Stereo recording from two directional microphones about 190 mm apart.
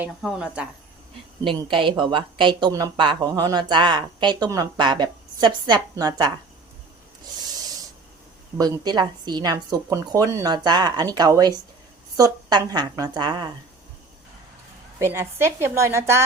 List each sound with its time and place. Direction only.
0.0 s speech: 5° right (ahead or behind)
1.5 s speech: 25° right (ahead or behind)
8.5 s speech: 20° right (ahead or behind)
14.9 s a woman's voice: 15° right (ahead or behind)